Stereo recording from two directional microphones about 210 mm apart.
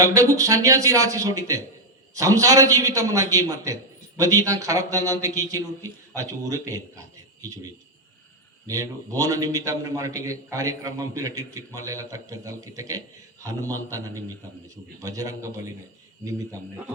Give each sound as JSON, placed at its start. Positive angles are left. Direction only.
{"t": 0.0, "sound": "a man's voice", "side_deg": -15}
{"t": 8.6, "sound": "a man's voice", "side_deg": -15}